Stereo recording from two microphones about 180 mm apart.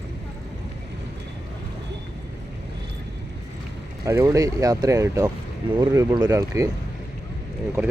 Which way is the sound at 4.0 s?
15° right (ahead or behind).